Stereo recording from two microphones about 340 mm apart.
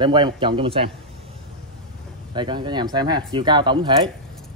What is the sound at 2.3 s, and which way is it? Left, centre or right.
Speech, centre.